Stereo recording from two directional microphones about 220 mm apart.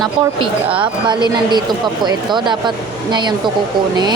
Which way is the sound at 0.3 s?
20° right (ahead or behind).